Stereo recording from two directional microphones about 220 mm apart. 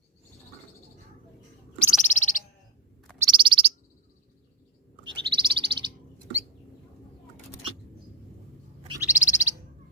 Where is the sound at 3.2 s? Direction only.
20° right (ahead or behind).